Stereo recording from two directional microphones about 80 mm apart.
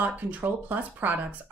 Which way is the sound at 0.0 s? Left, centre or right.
Right.